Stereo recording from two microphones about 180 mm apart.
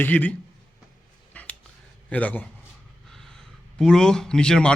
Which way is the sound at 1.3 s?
5° left (ahead or behind).